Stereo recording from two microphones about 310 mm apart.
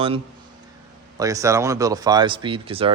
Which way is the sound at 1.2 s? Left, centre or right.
Centre.